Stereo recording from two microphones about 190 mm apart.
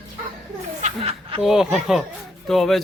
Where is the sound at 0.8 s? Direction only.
35° right (ahead or behind).